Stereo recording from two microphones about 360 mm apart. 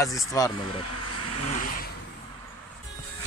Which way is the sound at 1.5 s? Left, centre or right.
Left.